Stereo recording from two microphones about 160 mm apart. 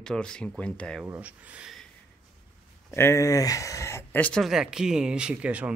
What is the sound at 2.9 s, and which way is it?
Speech, 15° left (ahead or behind).